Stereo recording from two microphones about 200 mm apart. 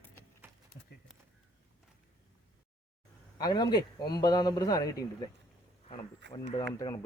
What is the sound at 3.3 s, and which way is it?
A man's voice, 20° left (ahead or behind).